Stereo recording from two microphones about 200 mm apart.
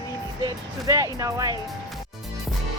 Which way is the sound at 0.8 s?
15° right (ahead or behind).